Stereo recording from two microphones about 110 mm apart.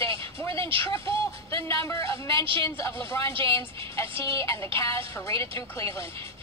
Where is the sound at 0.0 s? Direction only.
55° right (ahead or behind).